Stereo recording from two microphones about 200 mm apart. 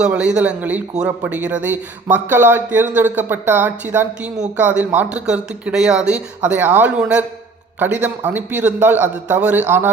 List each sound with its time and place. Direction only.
0.0 s a man's voice: 5° right (ahead or behind)